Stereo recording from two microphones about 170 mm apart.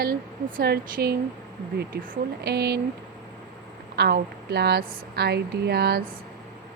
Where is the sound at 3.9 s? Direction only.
75° right (ahead or behind).